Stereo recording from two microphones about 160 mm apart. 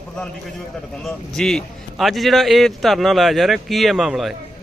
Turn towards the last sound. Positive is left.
turn(degrees=0)  # may be behind; listen again after turning